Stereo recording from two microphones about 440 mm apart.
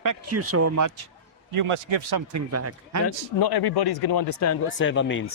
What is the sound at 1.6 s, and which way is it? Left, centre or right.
Speech, right.